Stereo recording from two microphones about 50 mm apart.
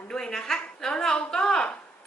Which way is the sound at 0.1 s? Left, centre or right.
Centre.